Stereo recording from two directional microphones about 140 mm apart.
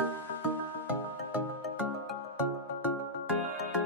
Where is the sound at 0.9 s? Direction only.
10° right (ahead or behind).